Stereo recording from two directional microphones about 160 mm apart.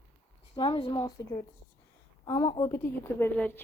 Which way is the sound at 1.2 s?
20° left (ahead or behind).